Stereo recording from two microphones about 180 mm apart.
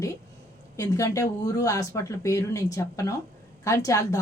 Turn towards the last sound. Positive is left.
turn(degrees=20)  # may be behind; listen again after turning